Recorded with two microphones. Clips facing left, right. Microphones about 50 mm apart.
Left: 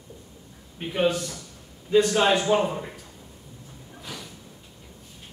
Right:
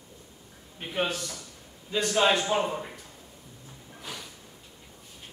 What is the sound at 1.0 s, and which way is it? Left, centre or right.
A man's voice, left.